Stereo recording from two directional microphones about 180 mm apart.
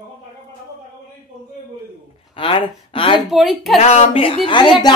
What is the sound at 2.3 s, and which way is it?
Speech, 30° left (ahead or behind).